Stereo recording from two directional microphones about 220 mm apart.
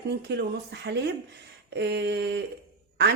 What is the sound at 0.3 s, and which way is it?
A woman's voice, 50° right (ahead or behind).